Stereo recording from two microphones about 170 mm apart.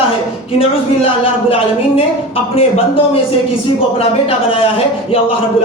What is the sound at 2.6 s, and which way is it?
Speech, 35° left (ahead or behind).